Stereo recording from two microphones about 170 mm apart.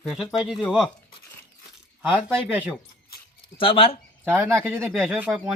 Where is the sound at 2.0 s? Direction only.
5° right (ahead or behind).